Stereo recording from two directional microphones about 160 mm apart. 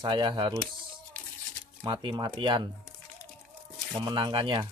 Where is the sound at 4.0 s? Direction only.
30° right (ahead or behind).